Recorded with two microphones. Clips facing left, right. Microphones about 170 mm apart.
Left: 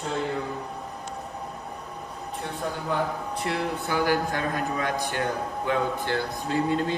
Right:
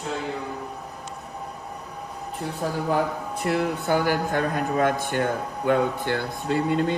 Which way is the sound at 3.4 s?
55° right (ahead or behind).